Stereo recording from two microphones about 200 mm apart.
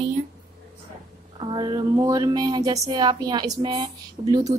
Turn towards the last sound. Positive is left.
turn(degrees=-20)  # may be behind; listen again after turning